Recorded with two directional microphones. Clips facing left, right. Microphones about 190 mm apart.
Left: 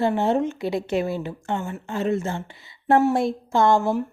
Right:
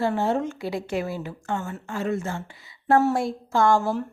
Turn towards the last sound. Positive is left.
turn(degrees=20)  # may be behind; listen again after turning